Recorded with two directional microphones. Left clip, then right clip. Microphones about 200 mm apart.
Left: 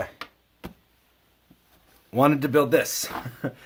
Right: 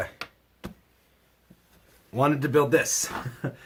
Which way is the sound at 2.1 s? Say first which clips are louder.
Left 2 dB; 40° left (ahead or behind).